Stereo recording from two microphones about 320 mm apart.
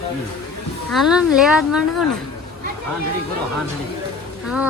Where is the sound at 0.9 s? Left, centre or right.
Centre.